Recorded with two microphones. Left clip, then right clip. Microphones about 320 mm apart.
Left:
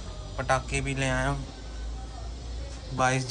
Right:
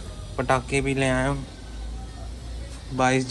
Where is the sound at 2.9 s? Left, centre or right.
Centre.